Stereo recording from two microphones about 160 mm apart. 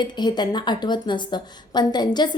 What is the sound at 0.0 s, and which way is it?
A woman's voice, 25° left (ahead or behind).